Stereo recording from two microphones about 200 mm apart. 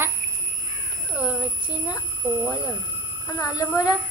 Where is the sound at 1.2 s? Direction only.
5° right (ahead or behind).